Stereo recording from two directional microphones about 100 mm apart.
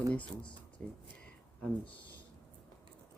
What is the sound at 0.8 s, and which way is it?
Speech, 10° left (ahead or behind).